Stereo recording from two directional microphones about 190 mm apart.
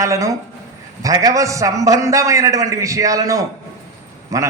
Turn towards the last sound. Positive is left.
turn(degrees=-15)  # may be behind; listen again after turning